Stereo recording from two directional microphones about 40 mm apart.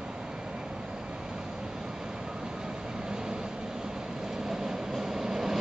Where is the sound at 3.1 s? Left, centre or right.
Centre.